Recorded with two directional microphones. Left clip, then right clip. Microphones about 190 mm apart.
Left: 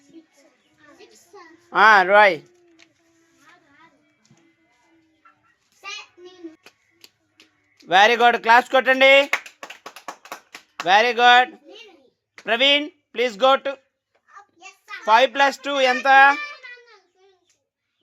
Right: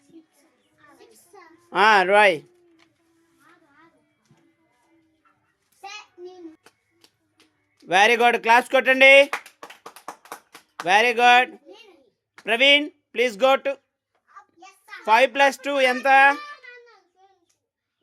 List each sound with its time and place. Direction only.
1.7 s speech: 25° right (ahead or behind)
7.8 s speech: 20° right (ahead or behind)
10.8 s speech: 20° right (ahead or behind)
15.0 s speech: 20° right (ahead or behind)